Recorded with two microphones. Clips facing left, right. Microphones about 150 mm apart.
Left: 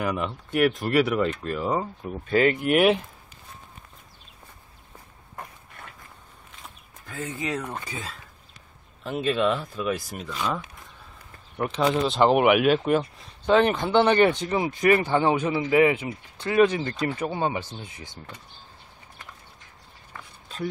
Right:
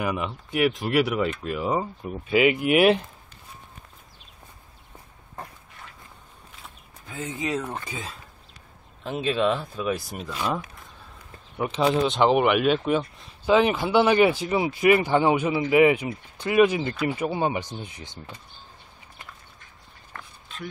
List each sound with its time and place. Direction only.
0.0 s speech: 5° right (ahead or behind)
7.1 s speech: 20° right (ahead or behind)
9.2 s speech: centre (ahead or behind)
11.5 s speech: 5° right (ahead or behind); by 18.2 s 20° right (ahead or behind)
20.1 s a sound: 5° left (ahead or behind)